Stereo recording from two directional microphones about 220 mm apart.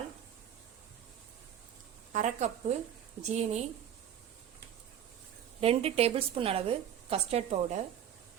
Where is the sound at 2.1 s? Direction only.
30° right (ahead or behind).